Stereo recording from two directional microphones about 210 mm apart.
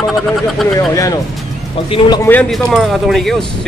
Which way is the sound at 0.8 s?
15° left (ahead or behind).